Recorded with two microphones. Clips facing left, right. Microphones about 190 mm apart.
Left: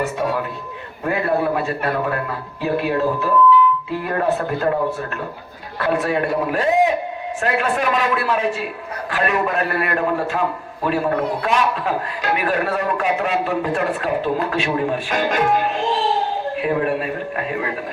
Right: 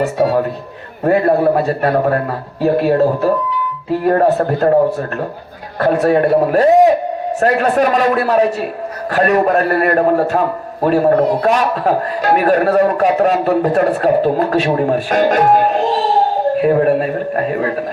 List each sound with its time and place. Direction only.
0.0 s a man's voice: 40° right (ahead or behind)
5.8 s a man's voice: 40° right (ahead or behind)